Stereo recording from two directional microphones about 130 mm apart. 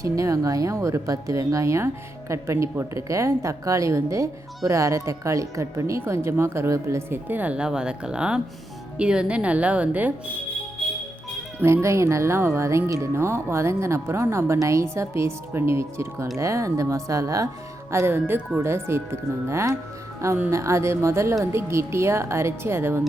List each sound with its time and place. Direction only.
0.0 s a woman's voice: 25° right (ahead or behind)
11.6 s a woman's voice: 20° right (ahead or behind)